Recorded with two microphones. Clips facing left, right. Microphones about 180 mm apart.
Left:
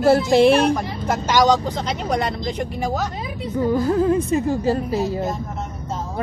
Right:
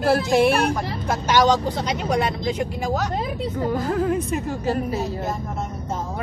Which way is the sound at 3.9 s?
25° left (ahead or behind).